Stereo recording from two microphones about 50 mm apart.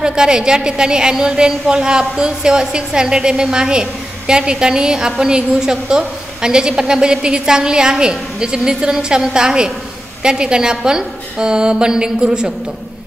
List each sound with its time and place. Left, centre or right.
0.0 s a woman's voice: centre